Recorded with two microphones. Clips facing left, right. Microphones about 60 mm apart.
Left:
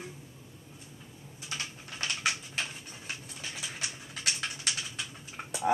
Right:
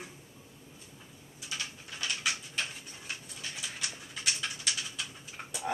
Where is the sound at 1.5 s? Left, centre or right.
Left.